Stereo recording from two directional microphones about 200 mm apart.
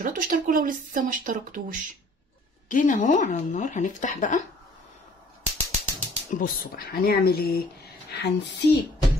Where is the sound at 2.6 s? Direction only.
40° left (ahead or behind).